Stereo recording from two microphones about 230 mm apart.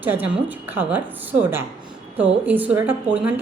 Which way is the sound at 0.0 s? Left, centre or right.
Centre.